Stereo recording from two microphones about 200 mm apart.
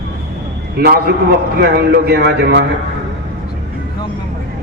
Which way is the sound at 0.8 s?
50° right (ahead or behind).